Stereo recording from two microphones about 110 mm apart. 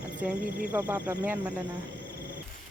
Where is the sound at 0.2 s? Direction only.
15° right (ahead or behind).